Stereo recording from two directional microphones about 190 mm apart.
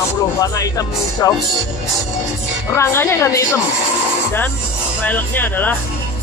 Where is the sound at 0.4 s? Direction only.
20° left (ahead or behind).